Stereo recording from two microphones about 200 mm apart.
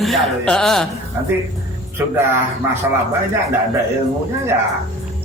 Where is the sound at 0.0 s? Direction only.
Centre (ahead or behind).